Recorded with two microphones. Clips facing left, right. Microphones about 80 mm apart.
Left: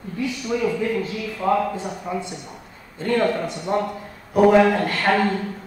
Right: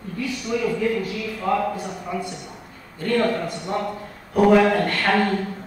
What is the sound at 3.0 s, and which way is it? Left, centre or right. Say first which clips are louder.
Speech: left 1 dB; left.